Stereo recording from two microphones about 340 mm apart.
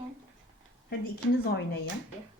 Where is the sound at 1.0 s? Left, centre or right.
Left.